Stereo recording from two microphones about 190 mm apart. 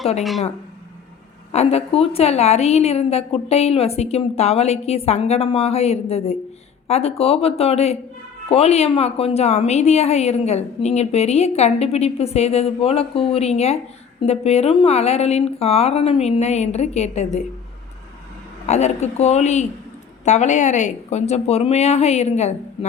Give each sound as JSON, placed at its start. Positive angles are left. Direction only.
{"t": 1.5, "sound": "a woman's voice", "side_deg": 30}
{"t": 18.6, "sound": "a woman's voice", "side_deg": 35}